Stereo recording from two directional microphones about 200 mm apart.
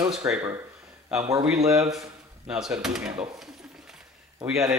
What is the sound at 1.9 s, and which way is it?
Speech, centre (ahead or behind).